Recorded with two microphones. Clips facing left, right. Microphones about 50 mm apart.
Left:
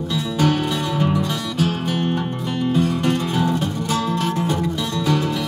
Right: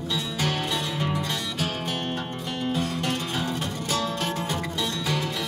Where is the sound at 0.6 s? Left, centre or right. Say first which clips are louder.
Left 7 dB; centre.